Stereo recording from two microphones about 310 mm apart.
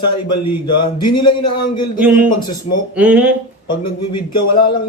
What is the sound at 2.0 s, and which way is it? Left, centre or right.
Speech, centre.